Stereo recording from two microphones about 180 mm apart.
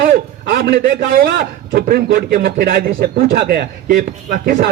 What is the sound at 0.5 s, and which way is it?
A man's voice, 55° right (ahead or behind).